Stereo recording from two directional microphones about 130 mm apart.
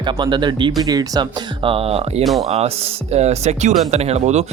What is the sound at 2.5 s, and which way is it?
Speech, 50° right (ahead or behind).